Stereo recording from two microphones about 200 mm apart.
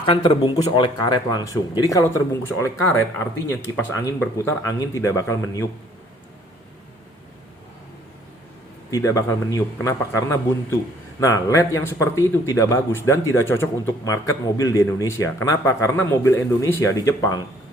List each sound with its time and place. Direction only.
0.0 s speech: 25° left (ahead or behind)
8.9 s speech: 15° left (ahead or behind)